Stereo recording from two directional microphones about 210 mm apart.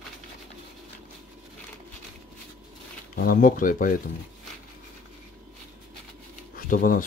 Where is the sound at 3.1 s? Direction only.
40° left (ahead or behind).